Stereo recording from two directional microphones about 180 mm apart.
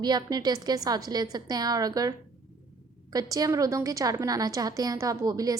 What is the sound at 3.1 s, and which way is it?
A woman's voice, 20° right (ahead or behind).